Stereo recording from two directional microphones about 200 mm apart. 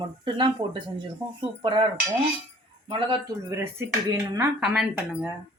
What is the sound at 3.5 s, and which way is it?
Speech, 15° right (ahead or behind).